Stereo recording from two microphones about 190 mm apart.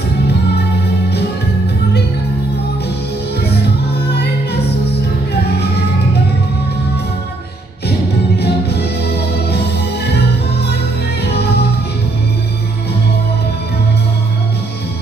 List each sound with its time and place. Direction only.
8.4 s music: 60° left (ahead or behind)